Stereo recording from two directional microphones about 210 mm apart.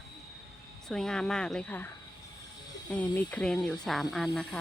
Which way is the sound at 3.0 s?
5° left (ahead or behind).